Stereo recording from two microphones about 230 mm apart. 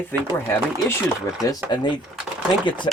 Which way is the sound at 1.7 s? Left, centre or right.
Centre.